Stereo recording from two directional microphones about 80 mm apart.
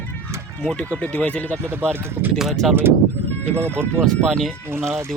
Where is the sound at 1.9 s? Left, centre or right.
Right.